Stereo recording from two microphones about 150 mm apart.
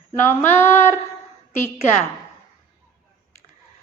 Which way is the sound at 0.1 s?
15° left (ahead or behind).